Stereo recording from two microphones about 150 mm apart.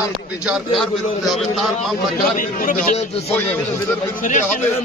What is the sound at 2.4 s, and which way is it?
Speech, 65° left (ahead or behind).